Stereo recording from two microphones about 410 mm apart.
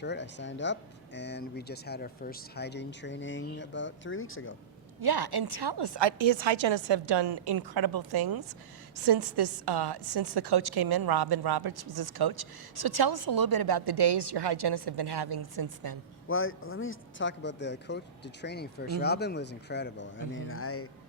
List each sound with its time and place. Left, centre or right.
0.0 s speech: left
4.9 s a woman's voice: right
16.3 s speech: left